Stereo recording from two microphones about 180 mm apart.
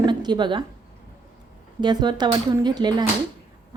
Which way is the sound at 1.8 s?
25° right (ahead or behind).